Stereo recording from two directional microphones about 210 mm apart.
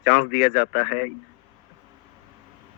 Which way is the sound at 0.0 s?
35° left (ahead or behind).